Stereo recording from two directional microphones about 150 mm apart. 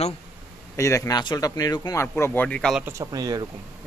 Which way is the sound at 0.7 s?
20° left (ahead or behind).